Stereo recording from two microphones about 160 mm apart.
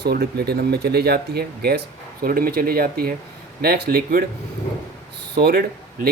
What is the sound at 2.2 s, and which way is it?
Speech, 65° right (ahead or behind).